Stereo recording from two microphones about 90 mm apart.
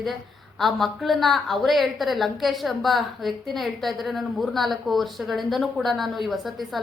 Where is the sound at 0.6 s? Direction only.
Centre (ahead or behind).